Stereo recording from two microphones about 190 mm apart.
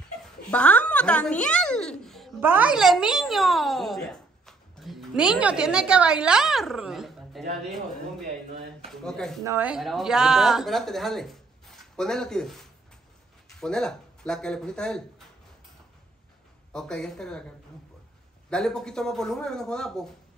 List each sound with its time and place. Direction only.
0.2 s a sound: 5° left (ahead or behind)
2.4 s speech: 10° right (ahead or behind)
8.9 s a woman's voice: 5° left (ahead or behind)
9.4 s a woman's voice: 10° right (ahead or behind); by 15.2 s 5° left (ahead or behind)
16.7 s a woman's voice: 5° left (ahead or behind)
18.5 s a woman's voice: 5° left (ahead or behind)